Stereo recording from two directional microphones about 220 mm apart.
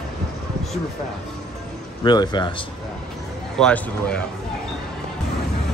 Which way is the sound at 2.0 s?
20° left (ahead or behind).